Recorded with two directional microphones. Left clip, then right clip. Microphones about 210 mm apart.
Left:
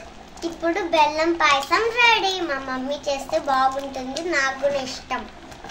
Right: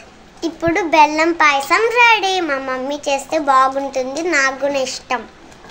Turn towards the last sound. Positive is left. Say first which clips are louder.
# right 6 dB
turn(degrees=-40)  # may be behind; listen again after turning